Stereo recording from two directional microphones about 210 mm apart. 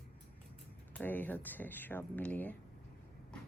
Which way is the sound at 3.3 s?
5° left (ahead or behind).